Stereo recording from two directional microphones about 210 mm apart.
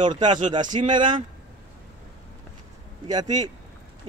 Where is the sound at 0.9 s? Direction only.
25° right (ahead or behind).